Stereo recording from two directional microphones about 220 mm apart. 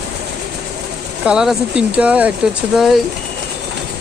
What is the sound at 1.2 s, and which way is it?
Speech, 5° right (ahead or behind).